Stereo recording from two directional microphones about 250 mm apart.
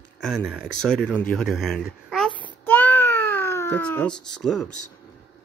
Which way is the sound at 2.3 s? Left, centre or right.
Centre.